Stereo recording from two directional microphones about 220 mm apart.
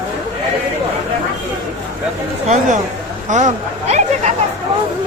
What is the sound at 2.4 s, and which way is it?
Chatter, 30° right (ahead or behind).